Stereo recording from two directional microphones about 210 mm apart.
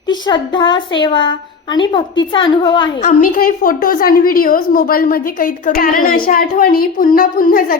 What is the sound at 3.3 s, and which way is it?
A woman's voice, 45° left (ahead or behind).